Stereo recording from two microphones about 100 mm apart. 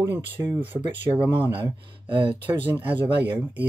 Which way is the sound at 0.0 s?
20° right (ahead or behind).